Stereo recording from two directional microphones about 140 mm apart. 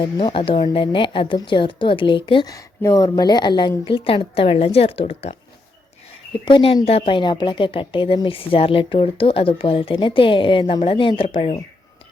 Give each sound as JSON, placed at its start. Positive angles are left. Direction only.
{"t": 0.0, "sound": "a woman's voice", "side_deg": 35}
{"t": 6.4, "sound": "speech", "side_deg": 40}